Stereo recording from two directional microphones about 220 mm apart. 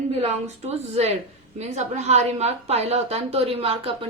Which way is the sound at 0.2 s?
30° right (ahead or behind).